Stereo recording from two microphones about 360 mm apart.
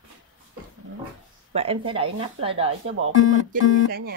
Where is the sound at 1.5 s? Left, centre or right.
Centre.